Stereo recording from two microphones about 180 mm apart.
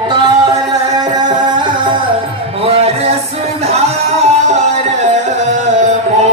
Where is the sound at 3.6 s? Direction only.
35° right (ahead or behind).